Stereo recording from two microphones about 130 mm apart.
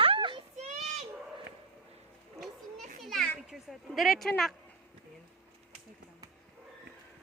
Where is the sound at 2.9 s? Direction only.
Centre (ahead or behind).